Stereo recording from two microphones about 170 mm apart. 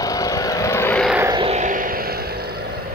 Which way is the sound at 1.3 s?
40° right (ahead or behind).